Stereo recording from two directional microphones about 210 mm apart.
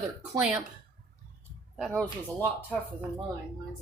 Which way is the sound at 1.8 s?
5° left (ahead or behind).